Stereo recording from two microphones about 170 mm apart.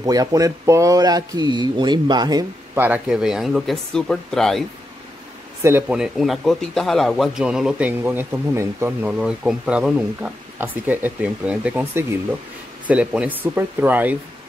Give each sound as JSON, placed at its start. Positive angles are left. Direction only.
{"t": 0.0, "sound": "speech", "side_deg": -20}
{"t": 2.8, "sound": "speech", "side_deg": -5}
{"t": 5.6, "sound": "speech", "side_deg": -15}